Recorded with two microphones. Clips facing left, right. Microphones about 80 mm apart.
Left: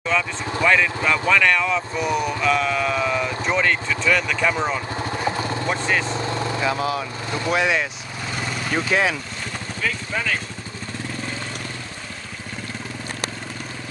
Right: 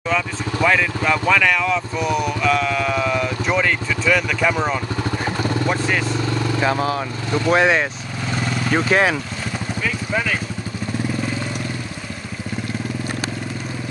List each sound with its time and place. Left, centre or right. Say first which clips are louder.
0.1 s speech: even; centre
6.0 s vehicle: right 2 dB; left
7.0 s speech: right 4 dB; right
7.5 s speech: right 4 dB; right
9.8 s speech: right 2 dB; centre